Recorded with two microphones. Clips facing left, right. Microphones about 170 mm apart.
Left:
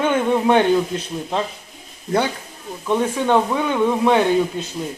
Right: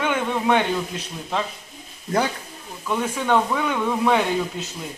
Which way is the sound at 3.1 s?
15° left (ahead or behind).